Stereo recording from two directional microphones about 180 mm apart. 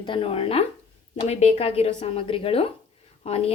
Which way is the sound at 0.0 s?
30° left (ahead or behind).